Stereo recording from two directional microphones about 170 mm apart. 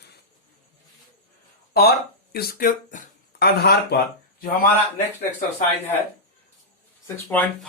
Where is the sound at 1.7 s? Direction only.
65° left (ahead or behind).